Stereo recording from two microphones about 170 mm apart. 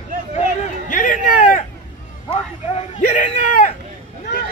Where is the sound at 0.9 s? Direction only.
55° left (ahead or behind).